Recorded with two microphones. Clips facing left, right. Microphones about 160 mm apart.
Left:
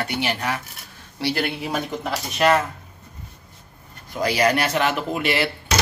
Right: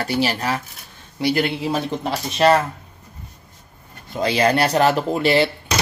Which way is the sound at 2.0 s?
30° right (ahead or behind).